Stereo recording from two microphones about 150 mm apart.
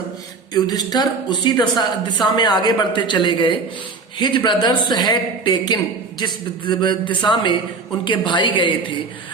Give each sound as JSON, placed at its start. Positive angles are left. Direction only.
{"t": 0.5, "sound": "a woman's voice", "side_deg": 25}